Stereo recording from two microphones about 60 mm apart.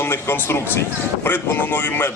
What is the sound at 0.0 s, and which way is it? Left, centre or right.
Speech, left.